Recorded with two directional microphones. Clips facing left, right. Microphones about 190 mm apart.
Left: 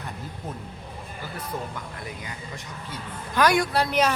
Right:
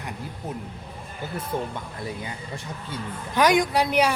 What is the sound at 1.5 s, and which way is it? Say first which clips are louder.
Speech: right 5 dB; 25° right (ahead or behind).